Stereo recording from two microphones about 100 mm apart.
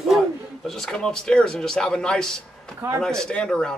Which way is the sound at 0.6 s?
5° left (ahead or behind).